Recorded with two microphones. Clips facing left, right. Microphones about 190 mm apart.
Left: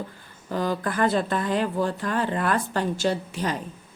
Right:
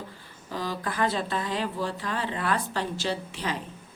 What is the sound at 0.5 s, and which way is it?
A woman's voice, 50° left (ahead or behind).